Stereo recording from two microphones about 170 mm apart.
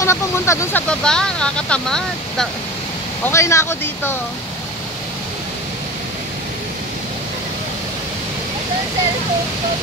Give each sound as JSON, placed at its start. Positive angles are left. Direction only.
{"t": 0.0, "sound": "speech", "side_deg": 15}
{"t": 0.8, "sound": "speech", "side_deg": 5}
{"t": 3.3, "sound": "speech", "side_deg": 15}